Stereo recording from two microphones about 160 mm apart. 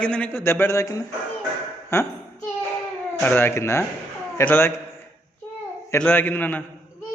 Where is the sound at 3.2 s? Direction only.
10° left (ahead or behind).